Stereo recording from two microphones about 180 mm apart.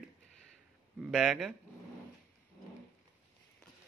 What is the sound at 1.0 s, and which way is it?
Speech, 5° right (ahead or behind).